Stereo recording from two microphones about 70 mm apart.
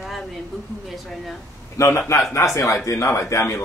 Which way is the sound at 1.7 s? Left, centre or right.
Left.